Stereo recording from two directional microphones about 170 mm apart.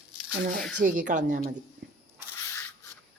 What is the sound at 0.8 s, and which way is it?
Speech, 50° right (ahead or behind).